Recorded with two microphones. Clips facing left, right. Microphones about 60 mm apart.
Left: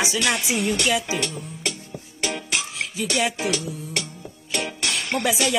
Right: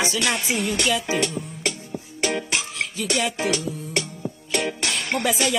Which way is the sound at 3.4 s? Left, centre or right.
Right.